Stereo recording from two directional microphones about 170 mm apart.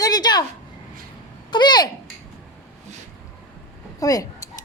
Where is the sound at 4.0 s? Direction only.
20° left (ahead or behind).